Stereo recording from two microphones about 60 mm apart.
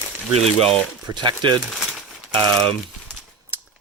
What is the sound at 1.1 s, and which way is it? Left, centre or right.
Speech, right.